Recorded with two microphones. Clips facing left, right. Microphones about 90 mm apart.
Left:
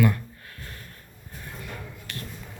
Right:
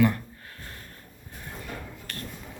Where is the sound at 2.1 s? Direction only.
40° right (ahead or behind).